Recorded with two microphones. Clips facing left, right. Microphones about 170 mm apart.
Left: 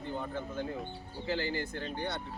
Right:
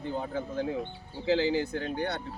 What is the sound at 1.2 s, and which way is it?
Speech, 90° right.